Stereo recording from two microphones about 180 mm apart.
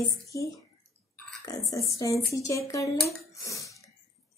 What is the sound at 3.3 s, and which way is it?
Throat clearing, 20° left (ahead or behind).